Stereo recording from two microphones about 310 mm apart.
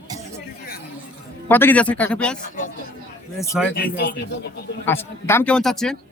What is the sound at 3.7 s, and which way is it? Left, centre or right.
Speech, left.